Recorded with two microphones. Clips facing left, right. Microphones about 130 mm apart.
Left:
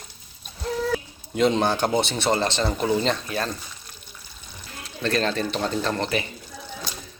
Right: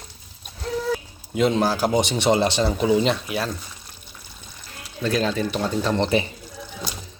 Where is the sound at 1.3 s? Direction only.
5° right (ahead or behind).